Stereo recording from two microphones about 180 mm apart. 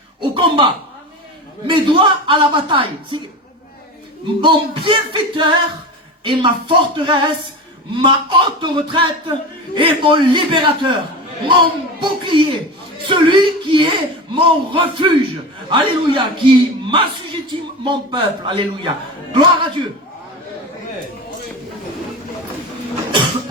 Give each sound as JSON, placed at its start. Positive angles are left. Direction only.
{"t": 0.2, "sound": "a man's voice", "side_deg": -25}
{"t": 4.4, "sound": "a man's voice", "side_deg": -25}